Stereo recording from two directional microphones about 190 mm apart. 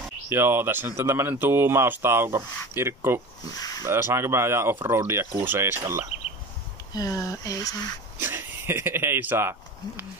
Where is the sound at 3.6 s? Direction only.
20° left (ahead or behind).